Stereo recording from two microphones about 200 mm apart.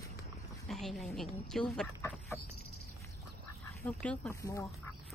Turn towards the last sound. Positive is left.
turn(degrees=15)  # may be behind; listen again after turning